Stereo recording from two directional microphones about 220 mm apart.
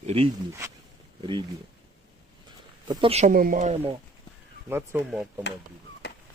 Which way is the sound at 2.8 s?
20° right (ahead or behind).